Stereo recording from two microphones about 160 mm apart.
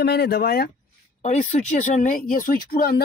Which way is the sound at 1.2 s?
50° left (ahead or behind).